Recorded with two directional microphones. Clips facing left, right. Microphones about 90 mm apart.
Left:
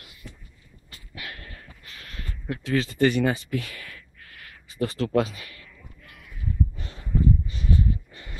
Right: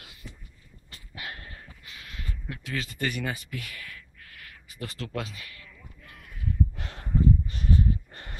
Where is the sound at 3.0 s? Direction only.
30° left (ahead or behind).